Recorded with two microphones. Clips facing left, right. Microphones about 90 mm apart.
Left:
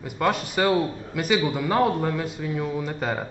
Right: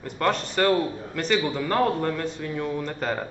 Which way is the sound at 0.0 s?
10° left (ahead or behind).